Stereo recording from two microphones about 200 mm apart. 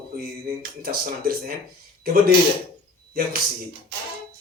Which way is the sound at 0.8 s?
50° right (ahead or behind).